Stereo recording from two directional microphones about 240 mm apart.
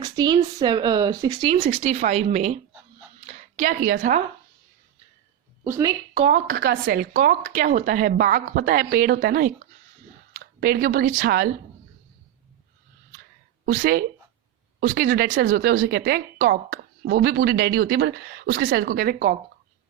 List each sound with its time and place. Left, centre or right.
0.0 s speech: centre; by 4.2 s right
5.6 s speech: centre
6.1 s a woman's voice: right
13.7 s a woman's voice: right